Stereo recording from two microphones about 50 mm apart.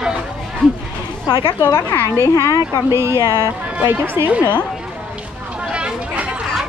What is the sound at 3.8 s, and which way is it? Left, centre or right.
Speech, right.